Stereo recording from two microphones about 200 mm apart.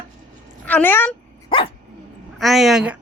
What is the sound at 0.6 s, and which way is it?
Speech, 10° left (ahead or behind).